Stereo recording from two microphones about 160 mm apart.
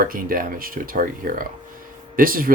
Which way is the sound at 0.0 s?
65° right (ahead or behind).